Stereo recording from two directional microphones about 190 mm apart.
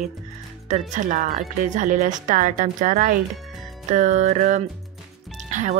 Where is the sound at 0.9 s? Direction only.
40° right (ahead or behind).